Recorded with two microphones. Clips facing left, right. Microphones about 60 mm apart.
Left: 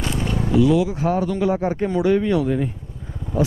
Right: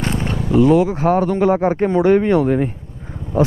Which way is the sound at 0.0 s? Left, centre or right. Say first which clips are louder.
Right 3 dB; right.